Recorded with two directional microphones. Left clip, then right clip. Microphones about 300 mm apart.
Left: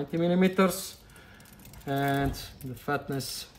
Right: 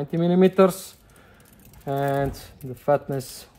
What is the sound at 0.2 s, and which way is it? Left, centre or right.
Speech, centre.